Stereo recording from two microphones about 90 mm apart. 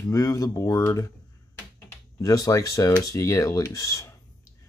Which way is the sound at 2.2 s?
40° left (ahead or behind).